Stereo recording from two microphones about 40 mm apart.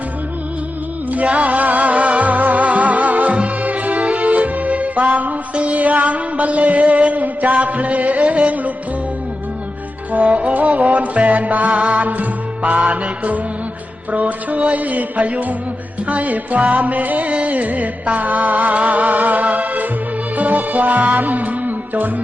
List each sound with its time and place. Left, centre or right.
1.1 s music: right
10.1 s music: right